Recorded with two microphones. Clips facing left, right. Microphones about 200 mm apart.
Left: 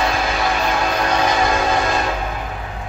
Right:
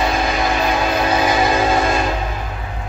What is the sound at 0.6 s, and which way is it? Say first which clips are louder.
Train: right 2 dB; 5° right (ahead or behind).